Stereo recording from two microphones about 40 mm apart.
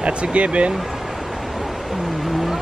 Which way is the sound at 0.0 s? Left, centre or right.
Right.